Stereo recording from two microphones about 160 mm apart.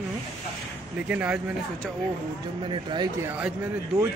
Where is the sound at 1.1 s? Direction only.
10° right (ahead or behind).